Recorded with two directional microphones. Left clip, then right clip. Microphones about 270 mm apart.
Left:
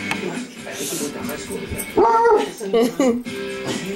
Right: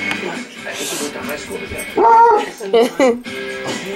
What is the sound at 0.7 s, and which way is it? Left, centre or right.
Speech, centre.